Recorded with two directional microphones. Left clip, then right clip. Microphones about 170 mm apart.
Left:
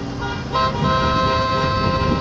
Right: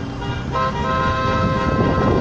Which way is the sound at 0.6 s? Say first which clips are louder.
Left 1 dB; 25° left (ahead or behind).